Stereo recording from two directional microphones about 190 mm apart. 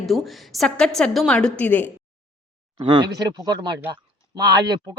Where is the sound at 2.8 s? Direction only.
25° right (ahead or behind).